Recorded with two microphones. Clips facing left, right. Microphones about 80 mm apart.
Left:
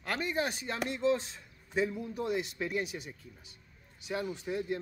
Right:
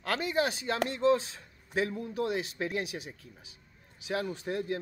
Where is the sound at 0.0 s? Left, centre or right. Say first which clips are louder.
Right 3 dB; right.